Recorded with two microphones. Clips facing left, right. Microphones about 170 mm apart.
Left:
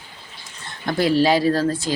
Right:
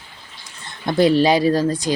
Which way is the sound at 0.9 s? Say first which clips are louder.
Right 3 dB; 20° right (ahead or behind).